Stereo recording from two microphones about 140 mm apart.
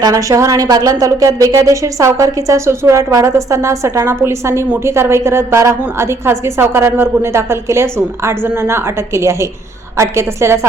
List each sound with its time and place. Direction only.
0.0 s a woman's voice: 25° right (ahead or behind)